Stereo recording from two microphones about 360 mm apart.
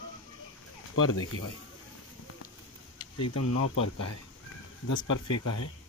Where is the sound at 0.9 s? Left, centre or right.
Left.